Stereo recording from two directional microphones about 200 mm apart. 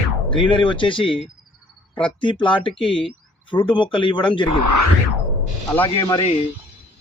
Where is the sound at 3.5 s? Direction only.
25° left (ahead or behind).